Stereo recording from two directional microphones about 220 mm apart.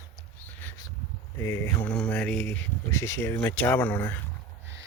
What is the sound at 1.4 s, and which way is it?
Speech, 10° left (ahead or behind).